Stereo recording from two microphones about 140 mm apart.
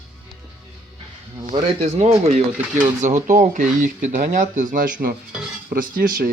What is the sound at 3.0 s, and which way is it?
Speech, 65° right (ahead or behind).